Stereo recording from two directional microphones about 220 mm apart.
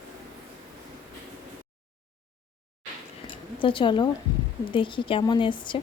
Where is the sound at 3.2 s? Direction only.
20° left (ahead or behind).